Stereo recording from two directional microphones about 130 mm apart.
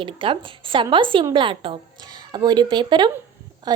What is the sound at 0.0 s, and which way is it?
A woman's voice, 40° right (ahead or behind).